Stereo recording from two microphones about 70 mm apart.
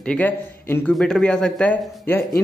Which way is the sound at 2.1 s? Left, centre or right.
Left.